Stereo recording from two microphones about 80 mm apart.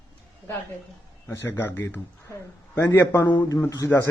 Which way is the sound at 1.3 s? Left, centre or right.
Left.